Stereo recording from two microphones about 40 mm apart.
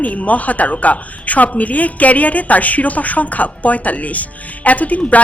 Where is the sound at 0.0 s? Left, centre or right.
Left.